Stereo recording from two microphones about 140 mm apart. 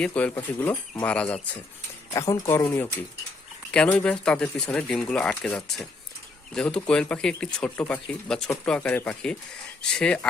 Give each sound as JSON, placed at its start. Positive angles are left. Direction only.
{"t": 0.0, "sound": "speech", "side_deg": 10}
{"t": 2.1, "sound": "speech", "side_deg": 20}